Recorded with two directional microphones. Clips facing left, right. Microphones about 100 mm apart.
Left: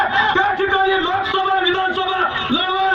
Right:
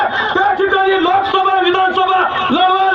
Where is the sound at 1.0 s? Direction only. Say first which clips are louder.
Right 6 dB; 80° right; by 2.9 s 60° right (ahead or behind).